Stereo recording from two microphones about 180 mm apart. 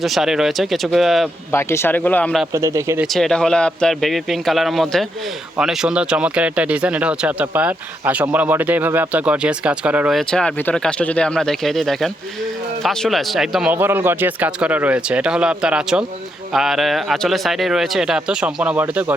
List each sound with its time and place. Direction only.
0.0 s speech: centre (ahead or behind)
1.5 s speech: 15° left (ahead or behind)
2.5 s speech: 15° right (ahead or behind)
3.0 s speech: centre (ahead or behind)